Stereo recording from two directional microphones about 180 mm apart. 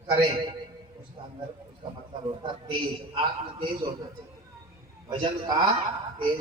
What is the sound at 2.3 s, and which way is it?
Speech, 25° right (ahead or behind).